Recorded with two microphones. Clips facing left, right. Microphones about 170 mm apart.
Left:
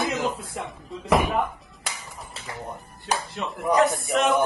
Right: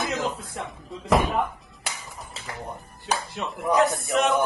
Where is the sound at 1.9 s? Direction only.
Centre (ahead or behind).